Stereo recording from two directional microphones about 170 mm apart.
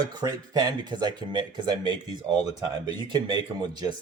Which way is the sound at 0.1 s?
25° right (ahead or behind).